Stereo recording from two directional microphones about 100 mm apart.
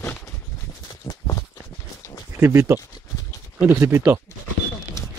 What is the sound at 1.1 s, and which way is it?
Walk, 35° left (ahead or behind).